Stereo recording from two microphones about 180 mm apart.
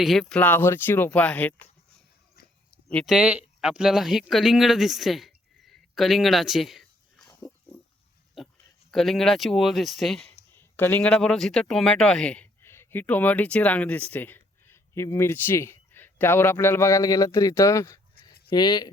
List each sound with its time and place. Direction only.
0.0 s speech: centre (ahead or behind)
2.9 s speech: 5° left (ahead or behind)
3.2 s speech: 5° right (ahead or behind)
8.4 s a sound: centre (ahead or behind)
8.9 s speech: centre (ahead or behind)
10.5 s speech: 10° left (ahead or behind)